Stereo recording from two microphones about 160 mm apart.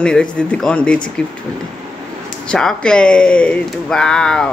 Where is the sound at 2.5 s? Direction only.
5° left (ahead or behind).